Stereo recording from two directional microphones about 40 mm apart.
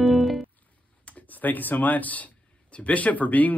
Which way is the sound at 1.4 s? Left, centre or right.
Left.